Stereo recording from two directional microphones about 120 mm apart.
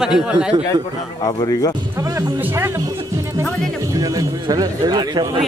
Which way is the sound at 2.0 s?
25° right (ahead or behind).